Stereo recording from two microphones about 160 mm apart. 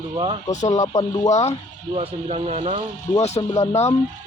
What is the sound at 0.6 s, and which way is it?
Speech, 20° left (ahead or behind).